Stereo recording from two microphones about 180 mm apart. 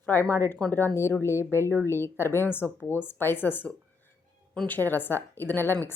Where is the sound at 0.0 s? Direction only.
10° left (ahead or behind).